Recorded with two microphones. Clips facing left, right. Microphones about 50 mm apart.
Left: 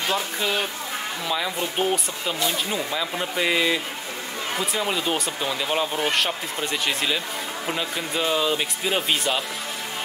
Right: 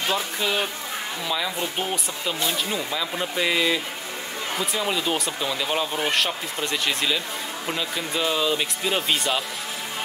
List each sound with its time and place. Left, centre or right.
0.1 s speech: centre